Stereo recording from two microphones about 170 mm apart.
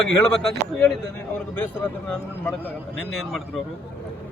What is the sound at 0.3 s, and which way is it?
Speech, centre (ahead or behind).